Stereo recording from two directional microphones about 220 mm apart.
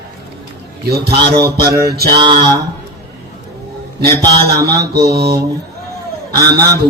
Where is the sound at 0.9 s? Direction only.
45° right (ahead or behind).